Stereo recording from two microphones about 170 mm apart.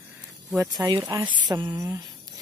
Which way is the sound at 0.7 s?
25° right (ahead or behind).